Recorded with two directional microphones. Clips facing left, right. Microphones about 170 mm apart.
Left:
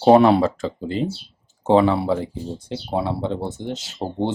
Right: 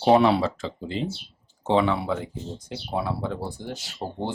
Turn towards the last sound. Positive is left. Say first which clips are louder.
# left 6 dB
turn(degrees=20)  # may be behind; listen again after turning